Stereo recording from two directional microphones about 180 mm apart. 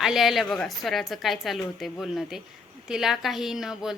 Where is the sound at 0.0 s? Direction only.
Centre (ahead or behind).